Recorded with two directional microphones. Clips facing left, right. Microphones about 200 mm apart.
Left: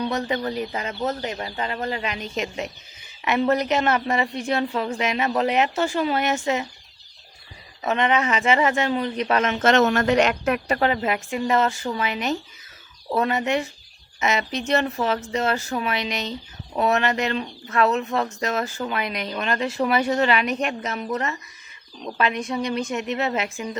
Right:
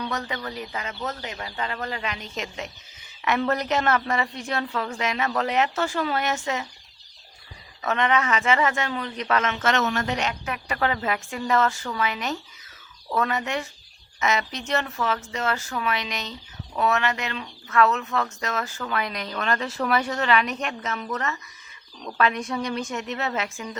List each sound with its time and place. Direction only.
0.0 s a woman's voice: 30° left (ahead or behind)
7.8 s a woman's voice: 20° left (ahead or behind)
9.8 s speech: 60° left (ahead or behind)
10.8 s a woman's voice: 20° left (ahead or behind)
22.4 s a woman's voice: 10° left (ahead or behind)